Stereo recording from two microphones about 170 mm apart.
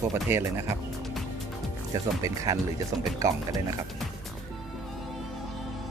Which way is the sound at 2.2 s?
20° right (ahead or behind).